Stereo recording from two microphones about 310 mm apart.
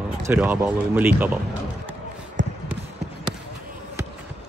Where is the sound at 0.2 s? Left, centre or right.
Centre.